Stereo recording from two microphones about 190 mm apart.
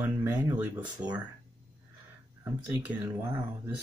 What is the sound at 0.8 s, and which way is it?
Speech, 20° right (ahead or behind).